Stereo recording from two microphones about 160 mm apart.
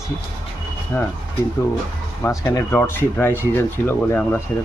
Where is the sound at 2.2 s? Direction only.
15° left (ahead or behind).